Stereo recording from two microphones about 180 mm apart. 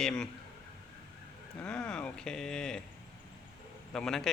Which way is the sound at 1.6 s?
5° left (ahead or behind).